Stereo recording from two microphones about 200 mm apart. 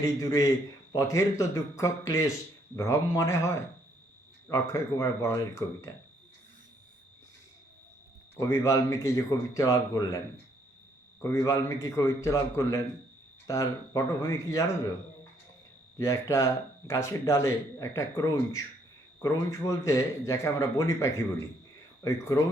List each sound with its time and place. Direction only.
0.0 s speech: 15° left (ahead or behind)
8.4 s speech: 15° left (ahead or behind)
11.2 s speech: 15° left (ahead or behind)
16.0 s speech: 15° left (ahead or behind)